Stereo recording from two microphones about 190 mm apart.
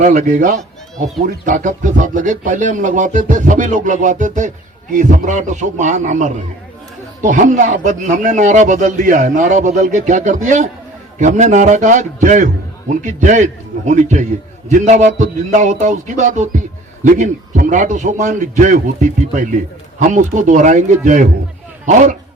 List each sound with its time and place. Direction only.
0.0 s speech: 40° right (ahead or behind)